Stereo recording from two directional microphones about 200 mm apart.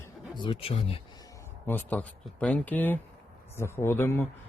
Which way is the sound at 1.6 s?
10° left (ahead or behind).